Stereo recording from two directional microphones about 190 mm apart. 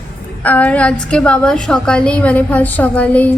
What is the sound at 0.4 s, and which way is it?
A woman's voice, 10° left (ahead or behind).